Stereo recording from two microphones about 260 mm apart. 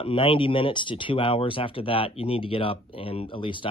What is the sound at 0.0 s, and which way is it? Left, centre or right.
Speech, left.